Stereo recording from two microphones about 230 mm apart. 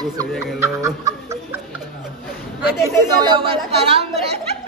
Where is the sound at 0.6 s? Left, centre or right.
Centre.